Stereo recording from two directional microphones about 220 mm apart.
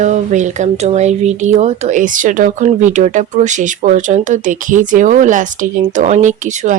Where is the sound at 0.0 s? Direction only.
35° right (ahead or behind).